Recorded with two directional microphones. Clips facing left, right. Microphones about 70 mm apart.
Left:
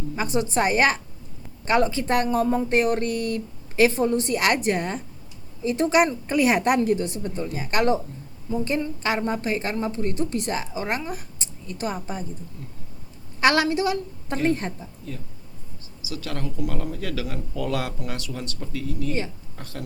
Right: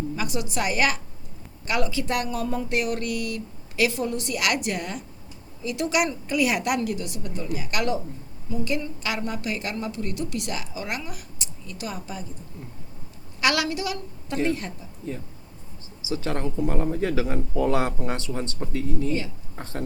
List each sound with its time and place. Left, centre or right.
0.2 s a woman's voice: left
13.4 s a woman's voice: left
15.0 s speech: right